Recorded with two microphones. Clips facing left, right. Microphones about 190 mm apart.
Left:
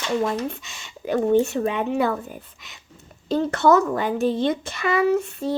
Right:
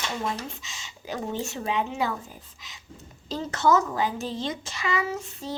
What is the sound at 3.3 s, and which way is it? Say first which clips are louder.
A woman's voice: left 6 dB; 60° left (ahead or behind).